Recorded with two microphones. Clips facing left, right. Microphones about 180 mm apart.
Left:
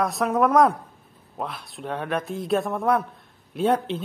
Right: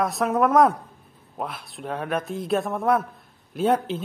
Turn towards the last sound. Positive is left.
turn(degrees=0)  # may be behind; listen again after turning